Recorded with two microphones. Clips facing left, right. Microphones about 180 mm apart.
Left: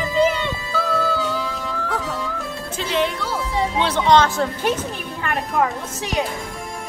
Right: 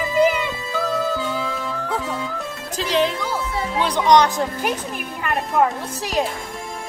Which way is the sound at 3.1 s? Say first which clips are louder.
Left 1 dB; 15° right (ahead or behind).